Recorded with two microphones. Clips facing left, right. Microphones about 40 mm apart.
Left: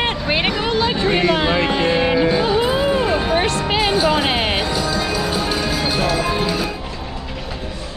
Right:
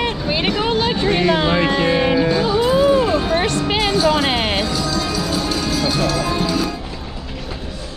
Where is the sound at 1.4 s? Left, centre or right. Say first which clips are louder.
Right 1 dB; left.